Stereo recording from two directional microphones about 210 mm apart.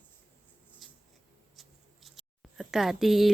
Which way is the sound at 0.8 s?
Centre (ahead or behind).